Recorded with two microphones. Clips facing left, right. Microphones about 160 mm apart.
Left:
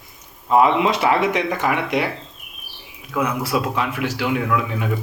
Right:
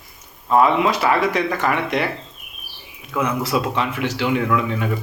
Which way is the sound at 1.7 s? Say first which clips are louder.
Even; 10° left (ahead or behind).